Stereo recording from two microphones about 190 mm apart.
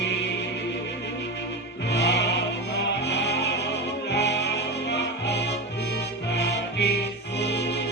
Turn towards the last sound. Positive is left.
turn(degrees=60)  # may be behind; listen again after turning